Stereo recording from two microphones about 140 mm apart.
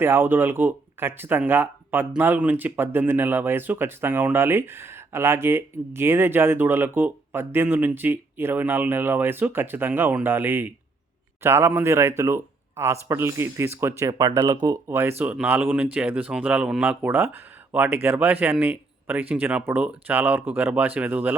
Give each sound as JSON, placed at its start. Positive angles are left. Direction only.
{"t": 0.0, "sound": "speech", "side_deg": -15}
{"t": 14.8, "sound": "speech", "side_deg": -15}